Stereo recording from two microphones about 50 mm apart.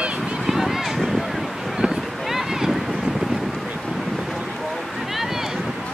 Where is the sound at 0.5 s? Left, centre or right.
Centre.